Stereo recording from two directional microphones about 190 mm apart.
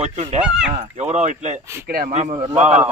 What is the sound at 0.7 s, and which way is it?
Speech, 35° right (ahead or behind).